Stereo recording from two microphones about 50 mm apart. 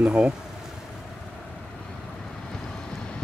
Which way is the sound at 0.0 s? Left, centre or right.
Right.